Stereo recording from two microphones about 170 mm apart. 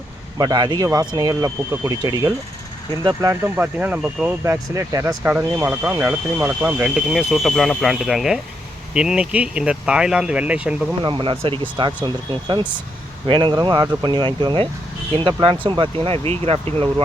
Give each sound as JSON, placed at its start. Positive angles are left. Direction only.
{"t": 0.3, "sound": "speech", "side_deg": -25}
{"t": 11.0, "sound": "speech", "side_deg": -30}